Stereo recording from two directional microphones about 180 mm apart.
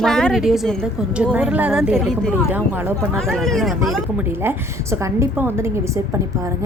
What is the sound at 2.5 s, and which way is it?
Speech, 10° right (ahead or behind).